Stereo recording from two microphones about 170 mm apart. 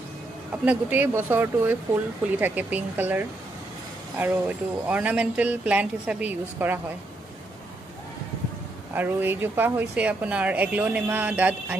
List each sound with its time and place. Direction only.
0.7 s speech: 10° right (ahead or behind)
8.9 s speech: 10° right (ahead or behind)